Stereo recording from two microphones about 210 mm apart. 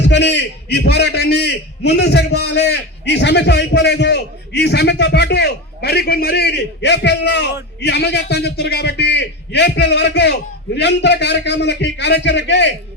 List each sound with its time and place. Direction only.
0.0 s a man's voice: 55° left (ahead or behind)